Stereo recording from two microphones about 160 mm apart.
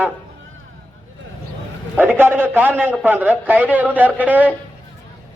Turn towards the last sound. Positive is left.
turn(degrees=-10)  # may be behind; listen again after turning